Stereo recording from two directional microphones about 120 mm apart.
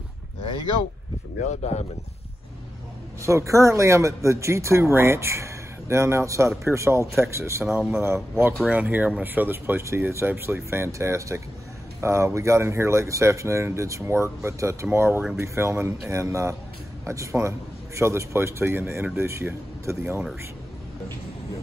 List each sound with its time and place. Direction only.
1.5 s speech: 65° left (ahead or behind)
3.2 s speech: 25° right (ahead or behind)